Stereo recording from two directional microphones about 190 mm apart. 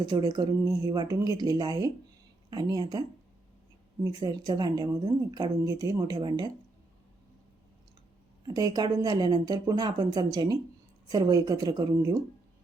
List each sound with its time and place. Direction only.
0.0 s speech: 20° right (ahead or behind)
4.0 s speech: 20° right (ahead or behind)
8.4 s speech: 20° right (ahead or behind)